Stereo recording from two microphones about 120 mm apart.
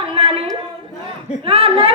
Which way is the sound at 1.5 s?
50° right (ahead or behind).